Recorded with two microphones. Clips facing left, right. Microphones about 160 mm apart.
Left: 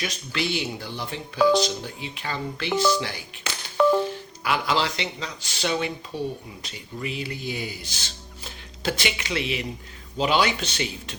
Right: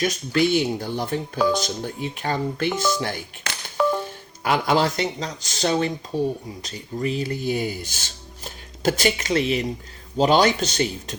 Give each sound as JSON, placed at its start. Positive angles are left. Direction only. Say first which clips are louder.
{"t": 0.0, "sound": "speech", "louder": "right 8 dB", "side_deg": -45}
{"t": 3.8, "sound": "music", "louder": "left 2 dB", "side_deg": -5}
{"t": 4.4, "sound": "speech", "louder": "right 4 dB", "side_deg": -45}